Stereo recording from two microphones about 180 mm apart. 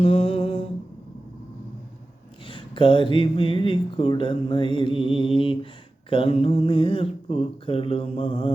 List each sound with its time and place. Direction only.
0.0 s humming: 30° left (ahead or behind)
2.5 s speech: 25° left (ahead or behind)